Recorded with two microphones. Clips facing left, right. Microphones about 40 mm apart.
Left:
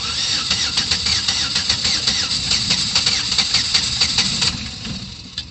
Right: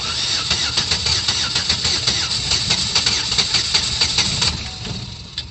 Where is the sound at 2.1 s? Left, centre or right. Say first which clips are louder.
Even; centre.